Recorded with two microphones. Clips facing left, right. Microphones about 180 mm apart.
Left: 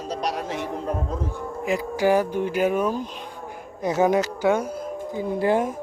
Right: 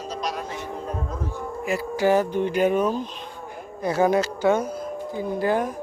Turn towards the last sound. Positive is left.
turn(degrees=25)  # may be behind; listen again after turning